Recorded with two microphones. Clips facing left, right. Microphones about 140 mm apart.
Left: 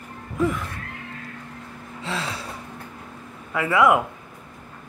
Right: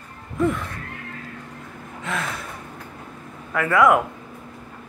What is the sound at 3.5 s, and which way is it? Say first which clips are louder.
Speech: right 1 dB; 20° left (ahead or behind).